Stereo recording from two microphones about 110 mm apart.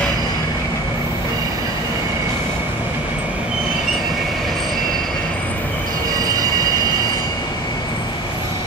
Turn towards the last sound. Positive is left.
turn(degrees=-35)  # may be behind; listen again after turning